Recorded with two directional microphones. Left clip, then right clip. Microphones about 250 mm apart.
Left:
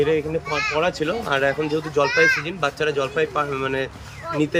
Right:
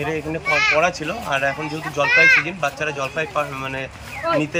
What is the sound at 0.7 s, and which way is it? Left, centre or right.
Speech, centre.